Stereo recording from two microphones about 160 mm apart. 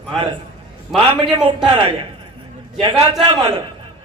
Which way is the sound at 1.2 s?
30° right (ahead or behind).